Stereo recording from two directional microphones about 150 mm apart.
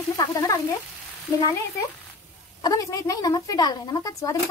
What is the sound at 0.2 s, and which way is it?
Speech, 20° left (ahead or behind).